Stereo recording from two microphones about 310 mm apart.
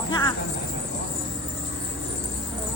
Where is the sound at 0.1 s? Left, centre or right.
Centre.